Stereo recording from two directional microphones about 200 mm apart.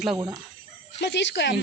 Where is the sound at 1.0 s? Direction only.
60° left (ahead or behind).